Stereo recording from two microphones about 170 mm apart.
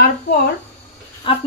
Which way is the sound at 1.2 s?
30° left (ahead or behind).